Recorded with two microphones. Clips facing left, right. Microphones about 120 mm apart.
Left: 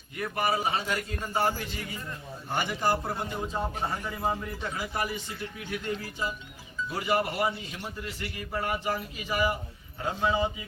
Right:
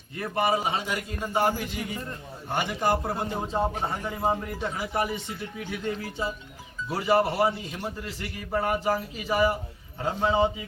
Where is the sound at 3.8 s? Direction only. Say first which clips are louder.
Right 3 dB; 20° right (ahead or behind).